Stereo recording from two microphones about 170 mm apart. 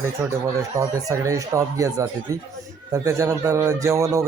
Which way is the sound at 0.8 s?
20° right (ahead or behind).